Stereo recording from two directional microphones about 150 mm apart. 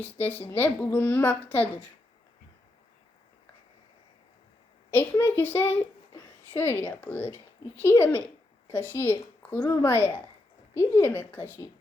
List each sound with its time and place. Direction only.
0.0 s a woman's voice: 10° left (ahead or behind)
5.2 s a woman's voice: 15° left (ahead or behind)